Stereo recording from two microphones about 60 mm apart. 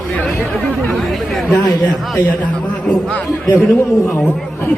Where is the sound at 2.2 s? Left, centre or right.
Left.